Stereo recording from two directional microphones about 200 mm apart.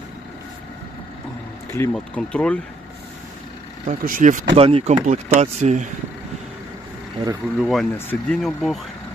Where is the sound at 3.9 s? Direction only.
40° right (ahead or behind).